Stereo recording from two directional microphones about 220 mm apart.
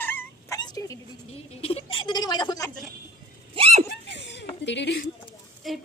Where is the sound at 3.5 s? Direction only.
30° right (ahead or behind).